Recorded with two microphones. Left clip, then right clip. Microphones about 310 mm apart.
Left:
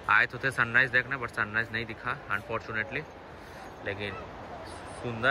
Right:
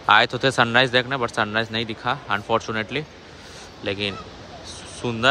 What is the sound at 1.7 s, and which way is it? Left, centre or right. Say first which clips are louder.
Speech: right 7 dB; right.